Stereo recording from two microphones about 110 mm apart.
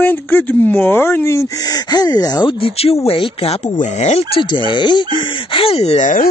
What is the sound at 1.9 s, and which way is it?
Speech, 35° left (ahead or behind).